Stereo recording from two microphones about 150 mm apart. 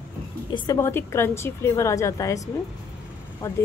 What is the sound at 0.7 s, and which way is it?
A woman's voice, 15° left (ahead or behind).